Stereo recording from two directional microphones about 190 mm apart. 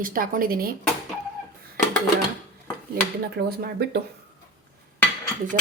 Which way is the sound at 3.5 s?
55° right (ahead or behind).